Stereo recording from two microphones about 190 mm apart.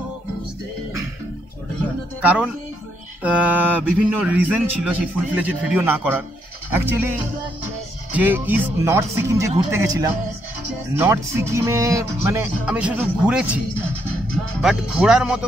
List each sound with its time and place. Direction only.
2.2 s a man's voice: 5° right (ahead or behind)
14.6 s speech: 5° right (ahead or behind)